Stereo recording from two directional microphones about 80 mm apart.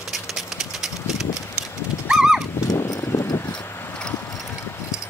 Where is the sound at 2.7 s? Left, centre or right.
Left.